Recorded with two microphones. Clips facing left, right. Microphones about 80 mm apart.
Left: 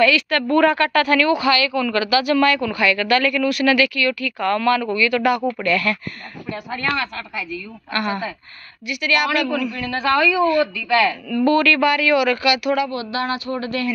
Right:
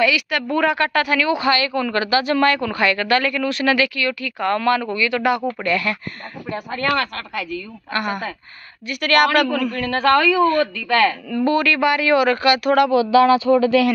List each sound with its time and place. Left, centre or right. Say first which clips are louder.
0.0 s a woman's voice: left 2 dB; centre
0.7 s a woman's voice: left 2 dB; right
1.4 s a woman's voice: left 1 dB; right
6.8 s a man's voice: right 4 dB; right
7.9 s a woman's voice: even; right
8.8 s a man's voice: right 4 dB; right
11.2 s a woman's voice: left 2 dB; centre; by 12.7 s right
13.5 s speech: right 10 dB; right